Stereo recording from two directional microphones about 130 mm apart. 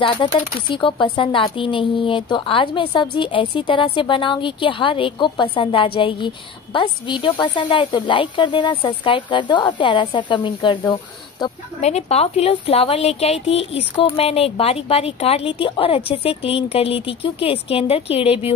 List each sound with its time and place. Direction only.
0.0 s speech: 40° left (ahead or behind)
11.8 s a woman's voice: 55° left (ahead or behind)